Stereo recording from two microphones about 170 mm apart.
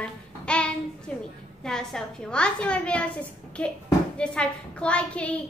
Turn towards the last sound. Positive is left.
turn(degrees=5)  # may be behind; listen again after turning